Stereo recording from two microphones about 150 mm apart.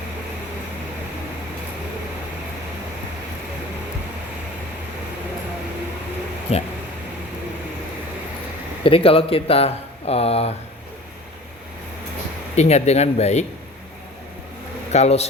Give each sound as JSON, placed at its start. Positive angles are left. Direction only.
{"t": 6.5, "sound": "speech", "side_deg": 45}
{"t": 8.8, "sound": "speech", "side_deg": 40}
{"t": 12.5, "sound": "speech", "side_deg": 45}
{"t": 14.9, "sound": "speech", "side_deg": 45}